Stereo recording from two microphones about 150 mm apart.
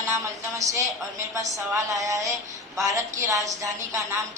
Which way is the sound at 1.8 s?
20° right (ahead or behind).